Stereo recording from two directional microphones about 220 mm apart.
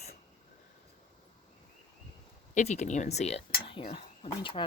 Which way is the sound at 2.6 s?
30° left (ahead or behind).